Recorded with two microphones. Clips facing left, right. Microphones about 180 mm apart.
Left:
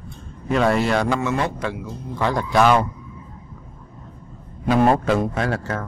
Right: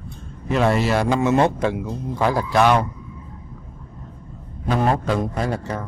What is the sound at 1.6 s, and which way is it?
Speech, 20° right (ahead or behind).